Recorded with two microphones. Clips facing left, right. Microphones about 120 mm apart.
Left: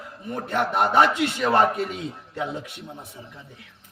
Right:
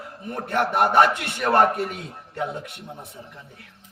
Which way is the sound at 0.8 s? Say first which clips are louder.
Even; 60° right (ahead or behind).